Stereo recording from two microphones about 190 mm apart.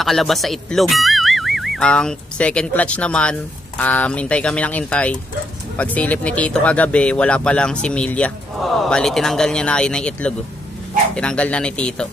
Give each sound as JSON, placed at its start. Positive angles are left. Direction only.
{"t": 0.0, "sound": "speech", "side_deg": 0}